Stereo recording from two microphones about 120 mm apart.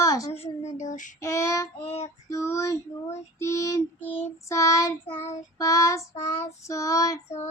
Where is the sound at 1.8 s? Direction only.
55° left (ahead or behind).